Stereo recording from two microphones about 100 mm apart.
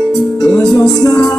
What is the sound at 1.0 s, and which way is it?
Music, 40° left (ahead or behind).